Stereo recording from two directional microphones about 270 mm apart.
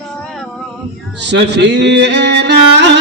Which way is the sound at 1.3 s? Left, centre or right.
Right.